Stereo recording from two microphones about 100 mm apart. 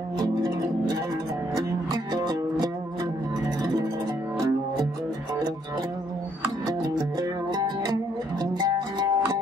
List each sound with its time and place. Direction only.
0.2 s music: 35° right (ahead or behind)
6.8 s music: 45° right (ahead or behind)